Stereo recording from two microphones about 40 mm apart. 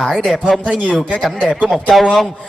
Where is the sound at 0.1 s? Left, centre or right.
Centre.